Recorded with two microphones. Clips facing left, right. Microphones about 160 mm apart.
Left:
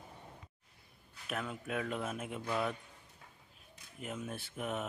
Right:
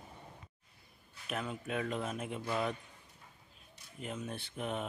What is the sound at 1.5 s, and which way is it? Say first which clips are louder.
Speech: right 2 dB; 5° left (ahead or behind).